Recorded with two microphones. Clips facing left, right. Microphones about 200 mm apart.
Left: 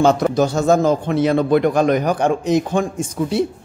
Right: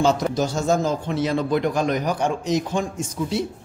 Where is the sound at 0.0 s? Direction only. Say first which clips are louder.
Left 5 dB; 60° left (ahead or behind).